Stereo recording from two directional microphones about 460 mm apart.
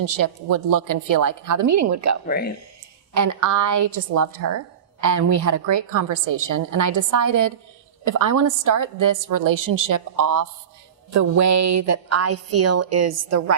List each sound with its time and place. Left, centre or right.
0.0 s a woman's voice: right
2.2 s speech: centre
3.2 s a woman's voice: right